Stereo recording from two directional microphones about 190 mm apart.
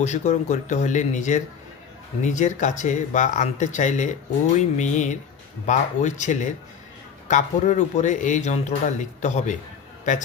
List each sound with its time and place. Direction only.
0.0 s speech: 35° left (ahead or behind)